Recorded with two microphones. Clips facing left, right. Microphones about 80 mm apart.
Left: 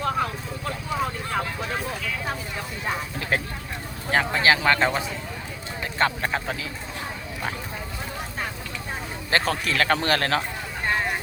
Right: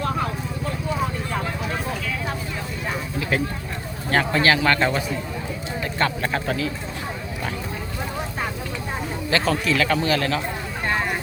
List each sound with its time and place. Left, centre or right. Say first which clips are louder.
3.2 s a sound: right 4 dB; left
4.1 s a man's voice: right 2 dB; centre
6.2 s speech: right 3 dB; centre
9.3 s a man's voice: right 2 dB; left